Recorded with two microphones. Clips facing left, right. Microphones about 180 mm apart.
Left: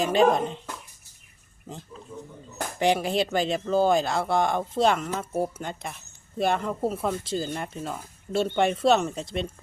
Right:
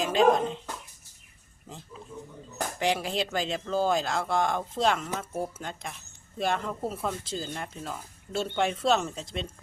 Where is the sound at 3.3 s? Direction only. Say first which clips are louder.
Left 5 dB; 5° left (ahead or behind).